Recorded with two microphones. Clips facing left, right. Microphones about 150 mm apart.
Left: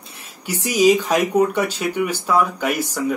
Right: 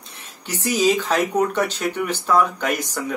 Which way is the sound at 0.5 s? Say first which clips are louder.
Left 4 dB; 15° left (ahead or behind).